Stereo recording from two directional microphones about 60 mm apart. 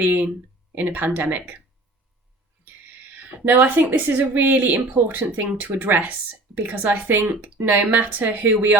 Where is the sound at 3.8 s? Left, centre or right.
Right.